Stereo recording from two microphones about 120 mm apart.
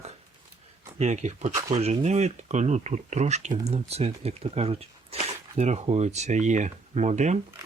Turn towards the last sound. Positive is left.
turn(degrees=-70)  # may be behind; listen again after turning